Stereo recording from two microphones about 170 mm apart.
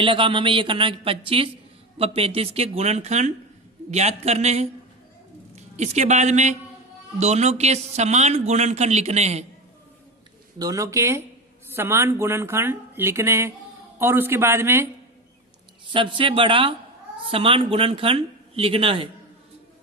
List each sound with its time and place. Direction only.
0.0 s a man's voice: 30° right (ahead or behind)
10.6 s speech: 20° right (ahead or behind)
15.9 s a man's voice: 30° right (ahead or behind)